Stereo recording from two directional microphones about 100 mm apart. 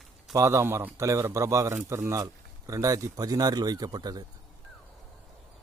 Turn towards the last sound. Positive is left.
turn(degrees=-40)  # may be behind; listen again after turning